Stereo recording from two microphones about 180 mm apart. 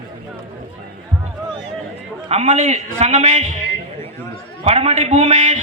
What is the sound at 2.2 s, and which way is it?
A man's voice, 35° right (ahead or behind).